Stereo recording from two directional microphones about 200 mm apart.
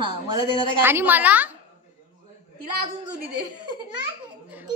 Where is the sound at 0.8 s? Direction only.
10° right (ahead or behind).